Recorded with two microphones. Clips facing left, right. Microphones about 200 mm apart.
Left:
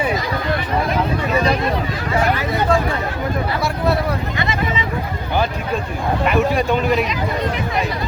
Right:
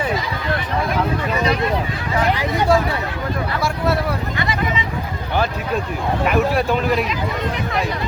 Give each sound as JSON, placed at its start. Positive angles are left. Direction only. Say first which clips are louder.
{"t": 2.4, "sound": "speech", "louder": "right 1 dB", "side_deg": -15}
{"t": 6.2, "sound": "speech", "louder": "left 1 dB", "side_deg": 0}